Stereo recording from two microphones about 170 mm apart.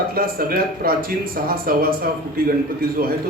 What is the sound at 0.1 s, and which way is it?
Speech, 60° right (ahead or behind).